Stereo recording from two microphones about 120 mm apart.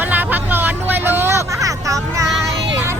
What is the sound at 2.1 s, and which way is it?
Child singing, 25° right (ahead or behind).